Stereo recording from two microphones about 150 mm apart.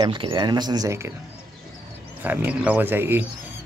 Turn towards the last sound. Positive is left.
turn(degrees=-15)  # may be behind; listen again after turning